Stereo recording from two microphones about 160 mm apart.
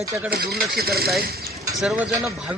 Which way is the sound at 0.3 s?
80° right.